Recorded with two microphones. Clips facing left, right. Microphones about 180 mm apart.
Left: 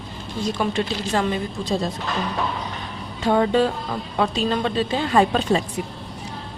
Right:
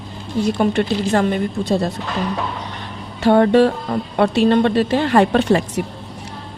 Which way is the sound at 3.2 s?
70° right (ahead or behind).